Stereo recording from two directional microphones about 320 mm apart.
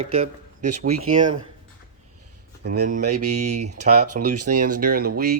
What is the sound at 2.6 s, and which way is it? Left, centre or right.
Speech, right.